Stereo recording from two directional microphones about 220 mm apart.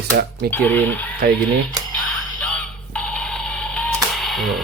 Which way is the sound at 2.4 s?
5° left (ahead or behind).